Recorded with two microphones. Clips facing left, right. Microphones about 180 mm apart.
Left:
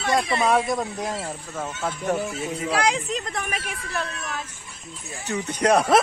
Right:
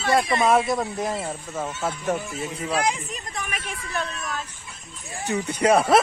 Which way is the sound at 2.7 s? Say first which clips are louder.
Left 2 dB; 80° left.